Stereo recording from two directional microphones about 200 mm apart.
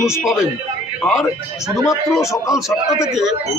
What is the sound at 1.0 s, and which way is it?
Speech, centre (ahead or behind).